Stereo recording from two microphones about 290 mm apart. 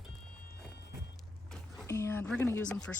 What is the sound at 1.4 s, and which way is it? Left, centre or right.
Speech, centre.